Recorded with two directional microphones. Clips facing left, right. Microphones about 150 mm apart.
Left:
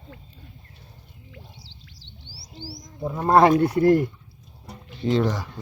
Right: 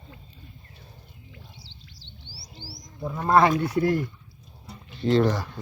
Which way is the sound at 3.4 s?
35° left (ahead or behind).